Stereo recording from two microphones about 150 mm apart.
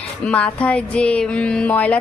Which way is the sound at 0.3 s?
10° left (ahead or behind).